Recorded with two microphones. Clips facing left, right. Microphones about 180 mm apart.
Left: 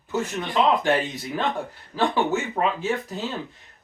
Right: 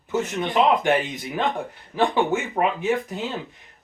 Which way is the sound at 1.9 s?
20° right (ahead or behind).